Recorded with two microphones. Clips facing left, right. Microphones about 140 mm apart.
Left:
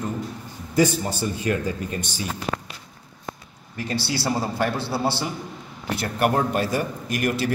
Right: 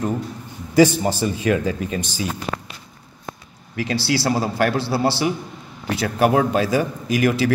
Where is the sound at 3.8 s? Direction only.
90° right.